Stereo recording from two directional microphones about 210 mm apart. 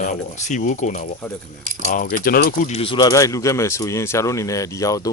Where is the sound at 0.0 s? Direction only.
35° left (ahead or behind).